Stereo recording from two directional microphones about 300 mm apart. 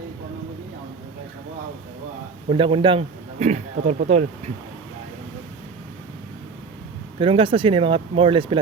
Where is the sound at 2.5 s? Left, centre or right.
Centre.